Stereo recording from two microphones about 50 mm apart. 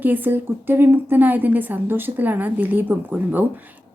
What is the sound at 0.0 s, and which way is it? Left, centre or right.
Speech, right.